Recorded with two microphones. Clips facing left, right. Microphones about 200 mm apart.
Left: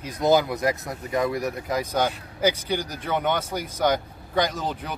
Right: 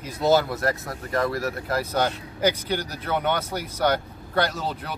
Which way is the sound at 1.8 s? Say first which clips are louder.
Even; 10° left (ahead or behind).